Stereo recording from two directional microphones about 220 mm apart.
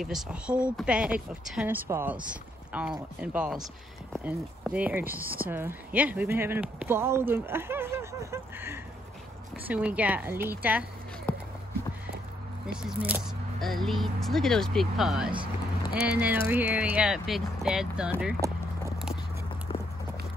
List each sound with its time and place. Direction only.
0.0 s speech: 5° right (ahead or behind)
11.3 s run: 5° left (ahead or behind)
13.0 s speech: 5° right (ahead or behind)
18.4 s speech: 15° right (ahead or behind)
19.7 s a sound: 25° left (ahead or behind)